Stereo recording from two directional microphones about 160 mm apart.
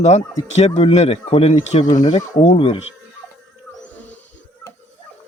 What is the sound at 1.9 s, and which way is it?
Speech, 50° left (ahead or behind).